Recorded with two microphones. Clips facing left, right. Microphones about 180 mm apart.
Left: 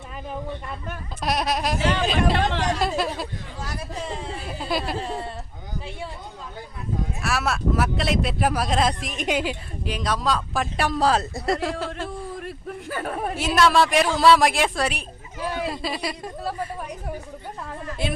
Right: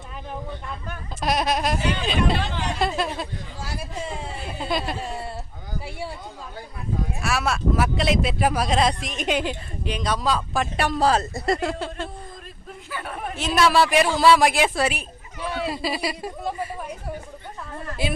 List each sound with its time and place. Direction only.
0.9 s speech: centre (ahead or behind)
2.1 s speech: 75° left (ahead or behind)
2.7 s speech: centre (ahead or behind)
7.2 s speech: centre (ahead or behind)
12.9 s speech: 40° left (ahead or behind)
13.3 s speech: 10° left (ahead or behind)
13.6 s speech: centre (ahead or behind)
18.0 s speech: centre (ahead or behind)